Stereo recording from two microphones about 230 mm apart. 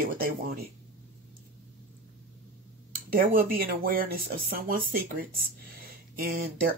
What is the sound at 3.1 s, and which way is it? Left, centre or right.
Speech, right.